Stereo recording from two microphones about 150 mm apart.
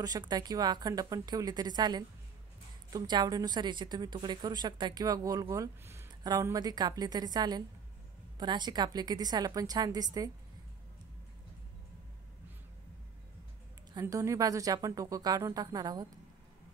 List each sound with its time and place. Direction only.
0.0 s a woman's voice: 25° right (ahead or behind)
13.9 s a woman's voice: 20° right (ahead or behind)